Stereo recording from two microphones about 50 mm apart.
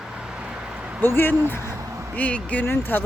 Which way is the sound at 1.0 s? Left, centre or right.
Left.